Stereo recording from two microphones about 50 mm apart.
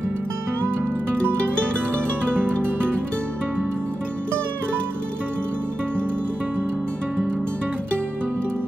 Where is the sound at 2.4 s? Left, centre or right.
Right.